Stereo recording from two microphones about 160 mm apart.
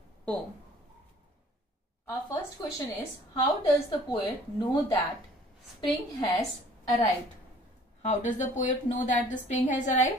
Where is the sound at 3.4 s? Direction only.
25° left (ahead or behind).